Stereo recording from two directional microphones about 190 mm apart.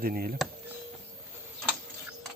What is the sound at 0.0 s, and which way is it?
Speech, 50° right (ahead or behind).